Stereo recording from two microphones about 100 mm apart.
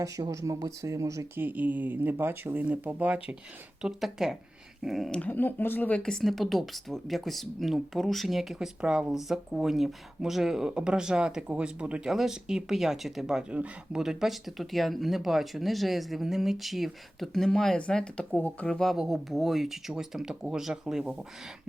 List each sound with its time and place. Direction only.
0.0 s speech: 35° right (ahead or behind)
1.4 s speech: 15° right (ahead or behind)
3.8 s speech: 5° right (ahead or behind)
5.2 s speech: 20° left (ahead or behind)
18.7 s speech: 5° left (ahead or behind)